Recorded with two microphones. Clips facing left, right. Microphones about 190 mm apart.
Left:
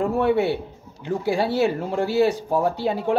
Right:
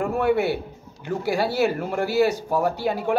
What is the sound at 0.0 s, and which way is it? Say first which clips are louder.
A man's voice: left 1 dB; 30° left (ahead or behind).